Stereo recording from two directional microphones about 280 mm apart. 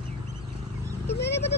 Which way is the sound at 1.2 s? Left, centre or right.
Left.